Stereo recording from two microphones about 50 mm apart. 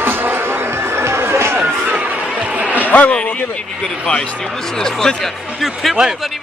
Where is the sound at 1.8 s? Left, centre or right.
Right.